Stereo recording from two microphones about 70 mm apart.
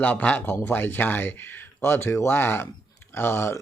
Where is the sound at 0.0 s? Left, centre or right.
Left.